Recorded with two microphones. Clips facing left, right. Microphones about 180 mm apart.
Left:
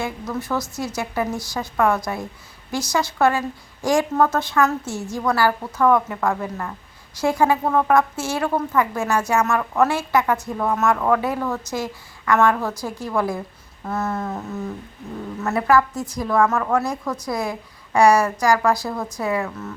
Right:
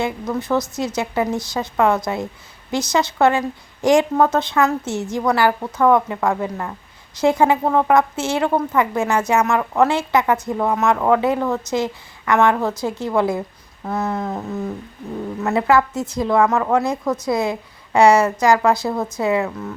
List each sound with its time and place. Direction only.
0.0 s a woman's voice: 20° right (ahead or behind)
13.8 s a sound: 15° right (ahead or behind)
15.4 s a woman's voice: 20° right (ahead or behind)